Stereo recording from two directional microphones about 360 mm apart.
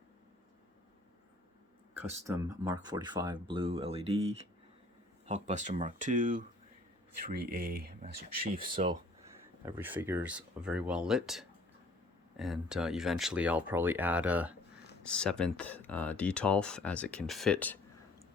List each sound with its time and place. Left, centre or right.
1.9 s speech: centre